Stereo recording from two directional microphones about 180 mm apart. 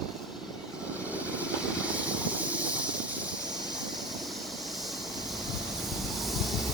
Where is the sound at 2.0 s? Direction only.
5° right (ahead or behind).